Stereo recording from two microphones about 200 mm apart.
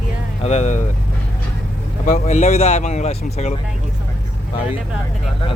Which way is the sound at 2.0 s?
35° left (ahead or behind).